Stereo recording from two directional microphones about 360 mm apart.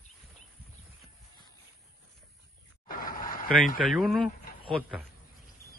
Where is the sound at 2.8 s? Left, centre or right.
Left.